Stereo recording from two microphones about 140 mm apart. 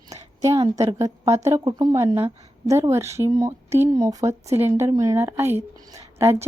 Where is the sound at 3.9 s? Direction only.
25° right (ahead or behind).